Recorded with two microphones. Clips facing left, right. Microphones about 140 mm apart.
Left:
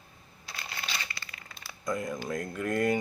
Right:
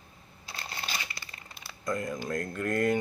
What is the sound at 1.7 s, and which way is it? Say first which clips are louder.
Speech: even; centre (ahead or behind).